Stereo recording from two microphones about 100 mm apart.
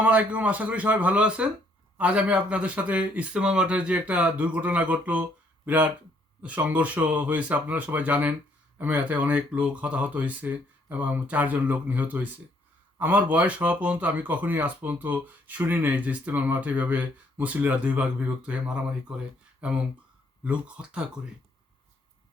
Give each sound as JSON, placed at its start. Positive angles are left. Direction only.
{"t": 0.0, "sound": "speech", "side_deg": -15}